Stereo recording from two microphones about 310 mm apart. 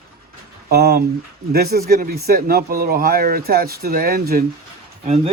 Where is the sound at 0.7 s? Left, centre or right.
Right.